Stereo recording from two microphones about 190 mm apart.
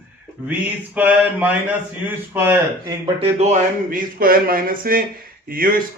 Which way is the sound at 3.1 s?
35° right (ahead or behind).